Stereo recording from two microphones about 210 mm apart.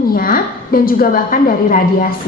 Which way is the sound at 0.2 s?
40° left (ahead or behind).